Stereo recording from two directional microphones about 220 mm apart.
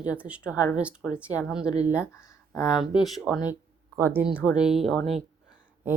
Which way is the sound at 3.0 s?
Centre (ahead or behind).